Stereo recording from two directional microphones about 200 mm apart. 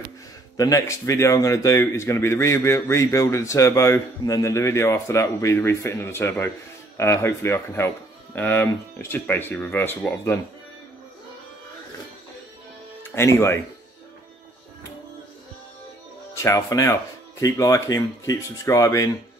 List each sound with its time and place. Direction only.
0.6 s speech: 15° left (ahead or behind)
13.1 s speech: 15° left (ahead or behind)
16.3 s speech: 15° left (ahead or behind)